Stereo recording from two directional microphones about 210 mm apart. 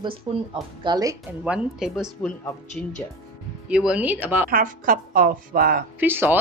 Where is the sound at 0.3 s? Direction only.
20° right (ahead or behind).